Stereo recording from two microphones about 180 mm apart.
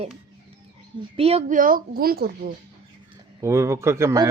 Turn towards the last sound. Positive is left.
turn(degrees=-15)  # may be behind; listen again after turning